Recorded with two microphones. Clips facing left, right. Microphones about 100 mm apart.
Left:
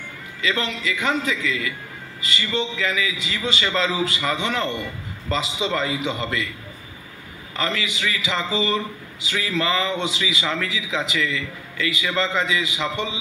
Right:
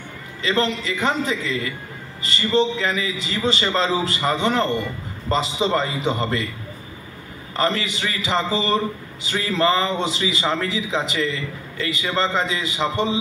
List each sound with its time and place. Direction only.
0.4 s a man's voice: 35° right (ahead or behind)
7.5 s a man's voice: 35° right (ahead or behind)